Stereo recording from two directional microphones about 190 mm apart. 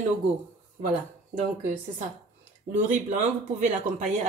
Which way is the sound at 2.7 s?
40° right (ahead or behind).